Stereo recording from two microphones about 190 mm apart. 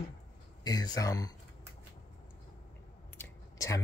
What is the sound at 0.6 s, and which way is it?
Speech, 20° left (ahead or behind).